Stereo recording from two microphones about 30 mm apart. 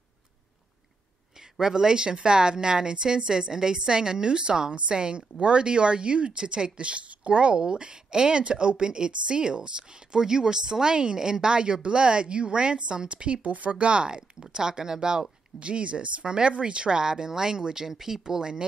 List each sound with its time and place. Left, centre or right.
1.3 s speech: centre; by 7.5 s right
7.5 s speech: right
13.4 s speech: right
15.6 s speech: right
16.3 s speech: right